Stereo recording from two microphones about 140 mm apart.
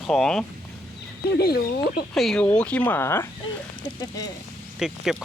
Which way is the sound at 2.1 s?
5° left (ahead or behind).